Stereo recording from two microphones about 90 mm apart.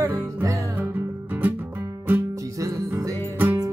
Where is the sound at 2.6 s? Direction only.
35° right (ahead or behind).